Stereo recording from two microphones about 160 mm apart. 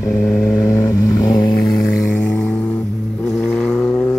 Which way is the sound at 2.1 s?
5° left (ahead or behind).